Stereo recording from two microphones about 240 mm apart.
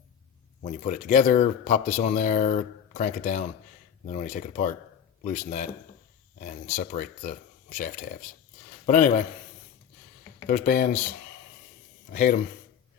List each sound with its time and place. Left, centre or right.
0.6 s speech: left
10.4 s speech: left
12.1 s speech: left